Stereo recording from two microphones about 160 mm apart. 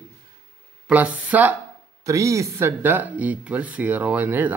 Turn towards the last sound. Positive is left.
turn(degrees=-10)  # may be behind; listen again after turning